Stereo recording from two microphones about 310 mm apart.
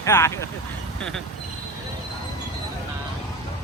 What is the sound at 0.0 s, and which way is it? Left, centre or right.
Speech, centre.